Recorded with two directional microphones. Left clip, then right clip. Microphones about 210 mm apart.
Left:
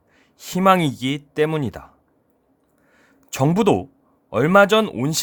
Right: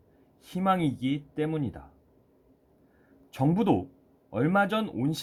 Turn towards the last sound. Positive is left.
turn(degrees=50)  # may be behind; listen again after turning